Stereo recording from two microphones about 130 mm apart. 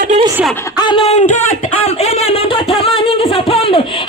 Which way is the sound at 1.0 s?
65° left (ahead or behind).